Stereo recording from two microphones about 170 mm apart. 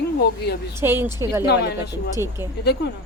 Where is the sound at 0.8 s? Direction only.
15° right (ahead or behind).